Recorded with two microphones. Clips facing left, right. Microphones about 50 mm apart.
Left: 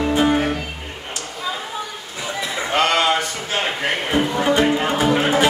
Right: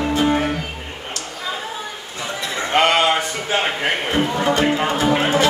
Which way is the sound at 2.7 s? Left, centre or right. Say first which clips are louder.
Right 2 dB; right.